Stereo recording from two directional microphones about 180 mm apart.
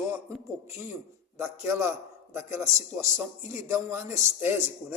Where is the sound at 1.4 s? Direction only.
15° right (ahead or behind).